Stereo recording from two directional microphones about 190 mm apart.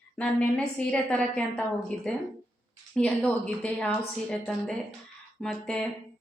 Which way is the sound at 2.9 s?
5° left (ahead or behind).